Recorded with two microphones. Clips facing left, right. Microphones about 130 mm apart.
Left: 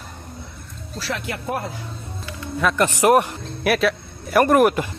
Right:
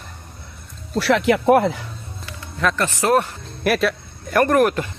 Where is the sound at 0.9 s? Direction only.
80° right.